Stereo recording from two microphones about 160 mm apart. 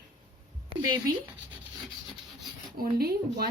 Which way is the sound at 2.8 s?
75° right (ahead or behind).